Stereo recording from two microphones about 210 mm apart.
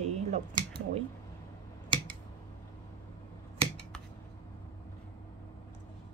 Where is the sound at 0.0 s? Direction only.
30° right (ahead or behind).